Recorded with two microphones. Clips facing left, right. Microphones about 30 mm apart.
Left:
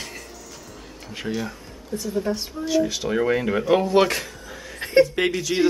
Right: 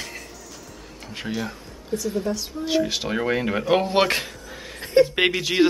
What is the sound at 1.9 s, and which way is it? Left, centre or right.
Speech, right.